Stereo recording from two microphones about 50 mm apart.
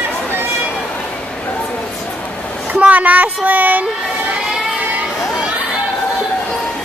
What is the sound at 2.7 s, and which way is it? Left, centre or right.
Speech, right.